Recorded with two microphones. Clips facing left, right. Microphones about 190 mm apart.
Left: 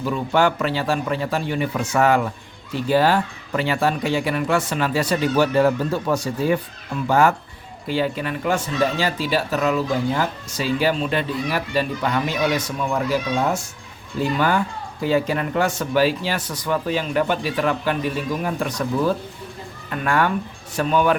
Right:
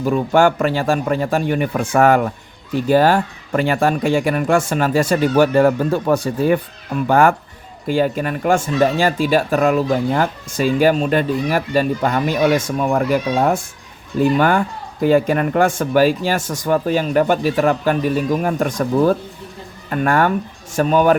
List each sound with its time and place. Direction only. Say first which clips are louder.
0.0 s speech: right 5 dB; 45° right (ahead or behind)